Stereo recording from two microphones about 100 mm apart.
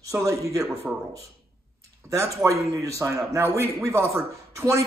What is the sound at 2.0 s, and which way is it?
A man's voice, 30° right (ahead or behind).